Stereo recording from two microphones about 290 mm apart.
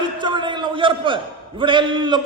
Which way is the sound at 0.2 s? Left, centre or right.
Centre.